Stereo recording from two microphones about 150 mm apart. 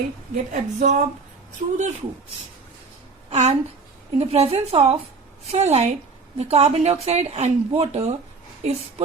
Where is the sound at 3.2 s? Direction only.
50° right (ahead or behind).